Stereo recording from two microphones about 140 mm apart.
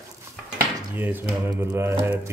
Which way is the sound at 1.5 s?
20° right (ahead or behind).